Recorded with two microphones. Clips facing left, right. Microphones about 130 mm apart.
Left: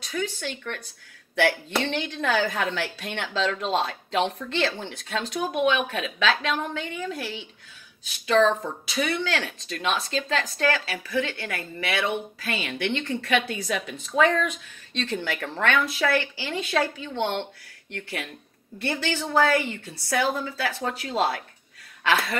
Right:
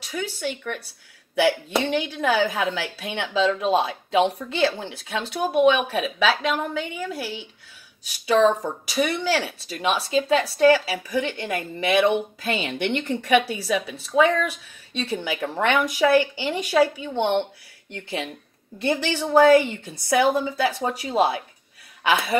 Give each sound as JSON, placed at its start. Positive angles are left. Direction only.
{"t": 0.1, "sound": "a woman's voice", "side_deg": -10}